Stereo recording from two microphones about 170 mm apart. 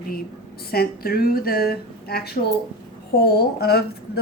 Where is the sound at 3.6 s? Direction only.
70° left (ahead or behind).